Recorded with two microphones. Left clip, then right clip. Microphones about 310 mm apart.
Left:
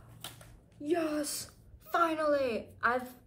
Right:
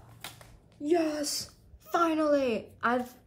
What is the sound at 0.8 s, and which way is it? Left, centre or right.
A woman's voice, right.